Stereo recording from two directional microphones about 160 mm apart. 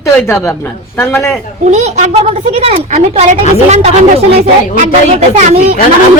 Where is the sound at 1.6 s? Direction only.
45° right (ahead or behind).